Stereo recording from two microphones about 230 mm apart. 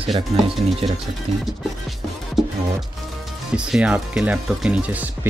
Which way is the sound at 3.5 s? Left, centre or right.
Centre.